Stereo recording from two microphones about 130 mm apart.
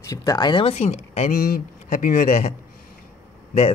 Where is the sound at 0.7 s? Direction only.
60° left (ahead or behind).